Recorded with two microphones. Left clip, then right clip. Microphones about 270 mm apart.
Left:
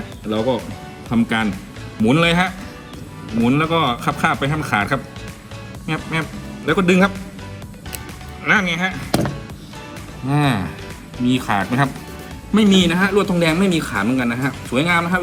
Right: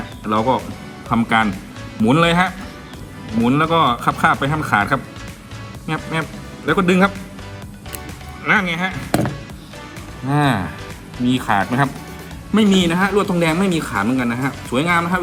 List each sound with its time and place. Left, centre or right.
0.3 s speech: centre
8.4 s speech: centre
10.2 s speech: centre